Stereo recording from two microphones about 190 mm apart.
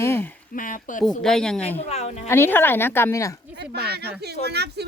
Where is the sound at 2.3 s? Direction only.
10° left (ahead or behind).